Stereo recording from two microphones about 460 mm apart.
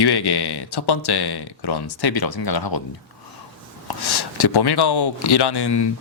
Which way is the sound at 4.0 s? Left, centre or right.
Left.